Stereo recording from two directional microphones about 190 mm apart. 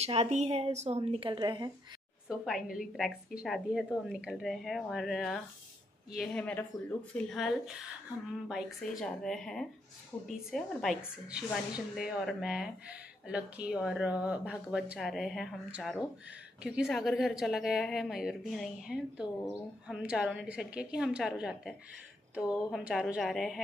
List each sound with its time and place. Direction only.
0.0 s a woman's voice: 35° right (ahead or behind)
2.2 s a woman's voice: centre (ahead or behind)